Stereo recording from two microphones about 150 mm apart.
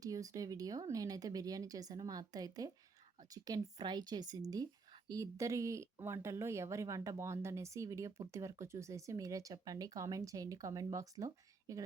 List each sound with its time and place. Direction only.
0.0 s speech: 20° right (ahead or behind)